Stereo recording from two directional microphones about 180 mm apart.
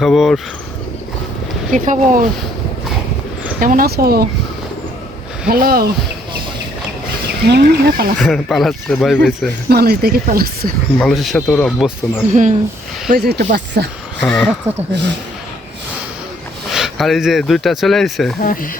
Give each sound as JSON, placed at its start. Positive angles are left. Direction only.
{"t": 0.0, "sound": "speech", "side_deg": 0}
{"t": 1.7, "sound": "speech", "side_deg": -45}
{"t": 3.6, "sound": "speech", "side_deg": -50}
{"t": 5.5, "sound": "speech", "side_deg": -55}
{"t": 7.5, "sound": "speech", "side_deg": -60}
{"t": 8.2, "sound": "speech", "side_deg": 0}
{"t": 9.6, "sound": "speech", "side_deg": -60}
{"t": 11.0, "sound": "speech", "side_deg": 0}
{"t": 12.3, "sound": "speech", "side_deg": -45}
{"t": 13.1, "sound": "speech", "side_deg": -60}
{"t": 14.2, "sound": "speech", "side_deg": 0}
{"t": 14.9, "sound": "speech", "side_deg": -75}
{"t": 16.7, "sound": "speech", "side_deg": 0}
{"t": 18.4, "sound": "speech", "side_deg": 50}